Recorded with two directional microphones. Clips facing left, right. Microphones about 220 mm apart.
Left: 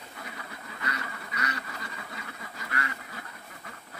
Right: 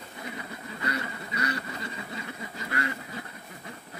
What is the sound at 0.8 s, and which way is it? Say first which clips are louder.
Quack: right 5 dB; 30° right (ahead or behind).